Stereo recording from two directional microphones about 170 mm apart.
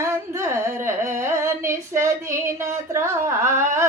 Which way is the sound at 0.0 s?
15° right (ahead or behind).